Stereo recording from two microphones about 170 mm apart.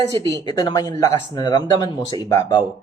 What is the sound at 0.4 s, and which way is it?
Speech, 25° left (ahead or behind).